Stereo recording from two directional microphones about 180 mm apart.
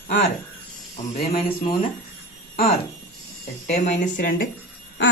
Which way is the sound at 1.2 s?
40° left (ahead or behind).